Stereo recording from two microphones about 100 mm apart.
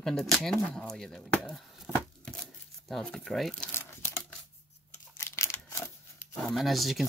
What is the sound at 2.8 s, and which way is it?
Speech, 5° left (ahead or behind).